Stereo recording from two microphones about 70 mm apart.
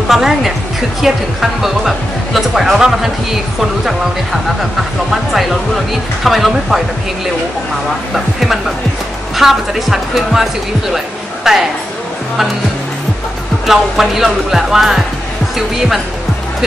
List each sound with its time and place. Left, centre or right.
0.1 s a woman's voice: centre
5.1 s a woman's voice: centre
8.1 s a woman's voice: centre
13.7 s a woman's voice: centre